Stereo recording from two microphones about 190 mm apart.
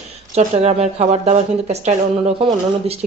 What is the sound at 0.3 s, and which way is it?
Speech, 35° right (ahead or behind).